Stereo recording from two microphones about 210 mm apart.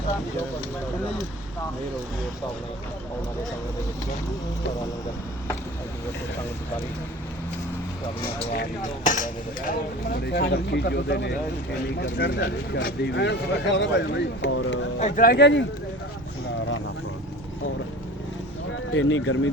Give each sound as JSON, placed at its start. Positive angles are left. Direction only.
{"t": 9.0, "sound": "speech", "side_deg": 40}
{"t": 14.9, "sound": "speech", "side_deg": 40}
{"t": 18.9, "sound": "speech", "side_deg": 70}